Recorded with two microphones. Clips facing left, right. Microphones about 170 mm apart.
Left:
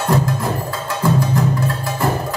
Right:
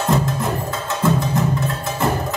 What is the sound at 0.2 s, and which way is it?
Music, 20° right (ahead or behind).